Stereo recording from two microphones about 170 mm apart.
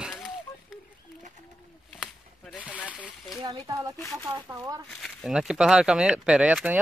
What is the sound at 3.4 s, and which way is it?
Speech, 20° right (ahead or behind).